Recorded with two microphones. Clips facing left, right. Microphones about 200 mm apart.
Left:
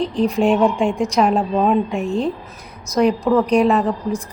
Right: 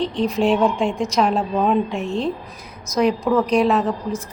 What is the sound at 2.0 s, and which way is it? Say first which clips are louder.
Speech: left 2 dB; 35° left (ahead or behind).